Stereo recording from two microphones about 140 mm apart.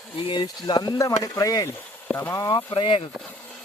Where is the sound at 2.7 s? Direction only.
40° left (ahead or behind).